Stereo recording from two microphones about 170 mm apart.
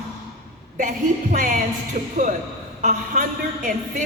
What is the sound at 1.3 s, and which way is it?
Speech, 50° right (ahead or behind).